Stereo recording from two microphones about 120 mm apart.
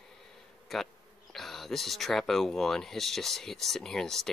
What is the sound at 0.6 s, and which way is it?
Speech, centre (ahead or behind).